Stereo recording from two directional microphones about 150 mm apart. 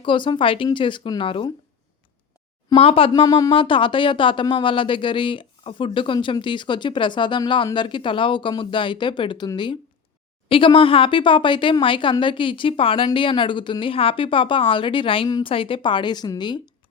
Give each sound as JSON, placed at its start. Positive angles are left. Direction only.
{"t": 0.0, "sound": "speech", "side_deg": 35}
{"t": 2.7, "sound": "speech", "side_deg": 40}
{"t": 3.1, "sound": "speech", "side_deg": 25}